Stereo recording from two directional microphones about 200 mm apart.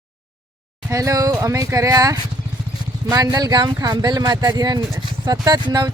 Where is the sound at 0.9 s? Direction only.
15° right (ahead or behind).